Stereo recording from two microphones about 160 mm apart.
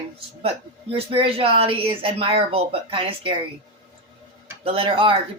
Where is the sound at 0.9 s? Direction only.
35° right (ahead or behind).